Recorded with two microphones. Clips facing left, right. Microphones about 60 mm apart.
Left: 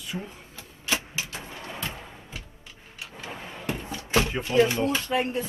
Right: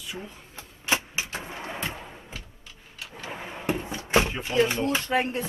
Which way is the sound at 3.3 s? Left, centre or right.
Centre.